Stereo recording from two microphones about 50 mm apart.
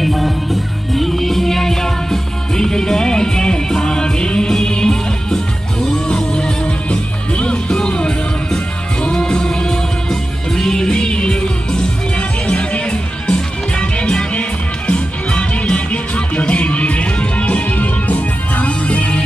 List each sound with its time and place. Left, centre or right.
0.0 s music: centre; by 19.2 s left